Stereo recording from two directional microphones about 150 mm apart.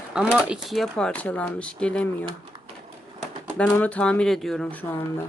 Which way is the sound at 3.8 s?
10° left (ahead or behind).